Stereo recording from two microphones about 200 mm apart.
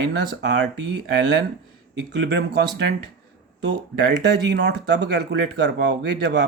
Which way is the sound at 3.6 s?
55° right (ahead or behind).